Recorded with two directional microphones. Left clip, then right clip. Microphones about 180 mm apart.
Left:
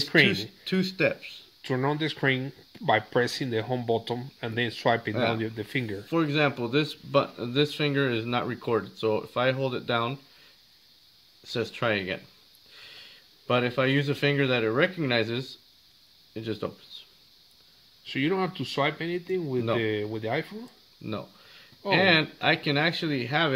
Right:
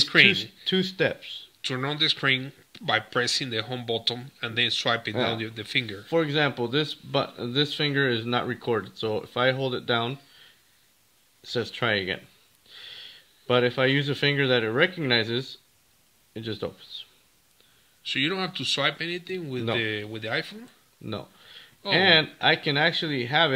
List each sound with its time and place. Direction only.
0.1 s speech: 20° left (ahead or behind)
0.7 s speech: 45° right (ahead or behind)
1.6 s speech: 25° left (ahead or behind)
6.0 s speech: 45° right (ahead or behind)
11.4 s speech: 45° right (ahead or behind)
18.0 s speech: 15° left (ahead or behind)
21.8 s speech: 45° right (ahead or behind)